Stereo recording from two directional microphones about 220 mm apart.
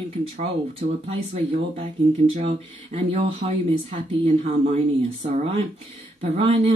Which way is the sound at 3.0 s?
25° right (ahead or behind).